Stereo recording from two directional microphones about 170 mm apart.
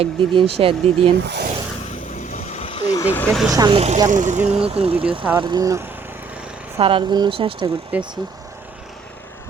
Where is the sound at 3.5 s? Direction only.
25° right (ahead or behind).